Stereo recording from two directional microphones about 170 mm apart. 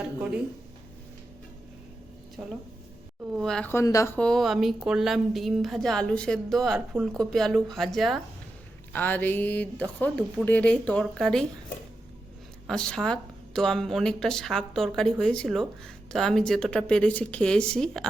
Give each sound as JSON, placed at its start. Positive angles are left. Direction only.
{"t": 2.4, "sound": "speech", "side_deg": -5}
{"t": 8.9, "sound": "speech", "side_deg": 10}
{"t": 12.6, "sound": "speech", "side_deg": 5}